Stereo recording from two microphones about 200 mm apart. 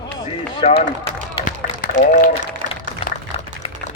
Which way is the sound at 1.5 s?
40° left (ahead or behind).